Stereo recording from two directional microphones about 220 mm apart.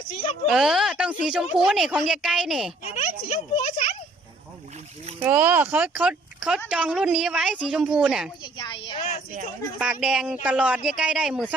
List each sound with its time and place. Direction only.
0.1 s a child's voice: 25° left (ahead or behind)
0.4 s a woman's voice: centre (ahead or behind)
2.8 s speech: 30° left (ahead or behind)
5.2 s a woman's voice: 10° right (ahead or behind)
8.5 s a child's voice: 20° left (ahead or behind)
9.7 s a woman's voice: 5° right (ahead or behind)